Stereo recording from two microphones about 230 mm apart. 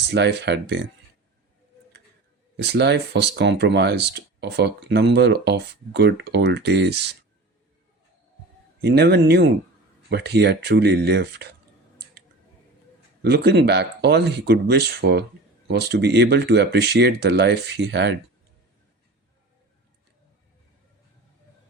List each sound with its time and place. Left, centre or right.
0.1 s speech: right
2.6 s speech: right
8.8 s speech: right
13.2 s speech: right